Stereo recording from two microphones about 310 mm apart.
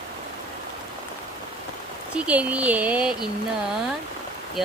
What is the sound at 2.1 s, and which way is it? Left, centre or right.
Speech, centre.